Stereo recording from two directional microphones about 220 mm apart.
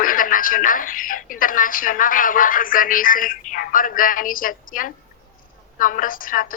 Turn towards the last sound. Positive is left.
turn(degrees=40)  # may be behind; listen again after turning